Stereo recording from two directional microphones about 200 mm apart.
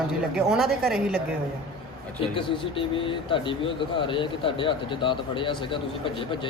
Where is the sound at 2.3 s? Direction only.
25° left (ahead or behind).